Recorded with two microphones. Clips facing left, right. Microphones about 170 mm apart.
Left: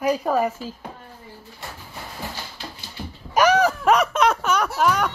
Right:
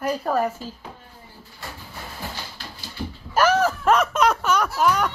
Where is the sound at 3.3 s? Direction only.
15° left (ahead or behind).